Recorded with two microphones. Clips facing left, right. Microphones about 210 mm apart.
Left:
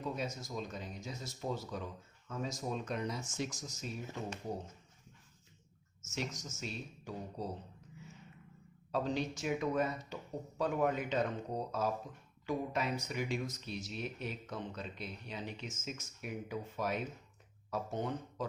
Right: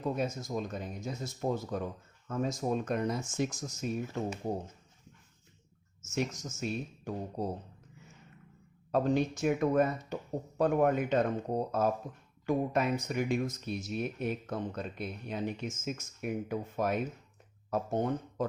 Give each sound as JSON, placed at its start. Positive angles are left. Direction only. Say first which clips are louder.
{"t": 0.3, "sound": "speech", "louder": "right 6 dB", "side_deg": -55}
{"t": 6.1, "sound": "speech", "louder": "right 7 dB", "side_deg": -50}
{"t": 8.9, "sound": "speech", "louder": "right 7 dB", "side_deg": -50}